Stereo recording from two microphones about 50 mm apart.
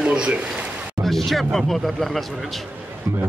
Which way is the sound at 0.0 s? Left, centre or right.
Centre.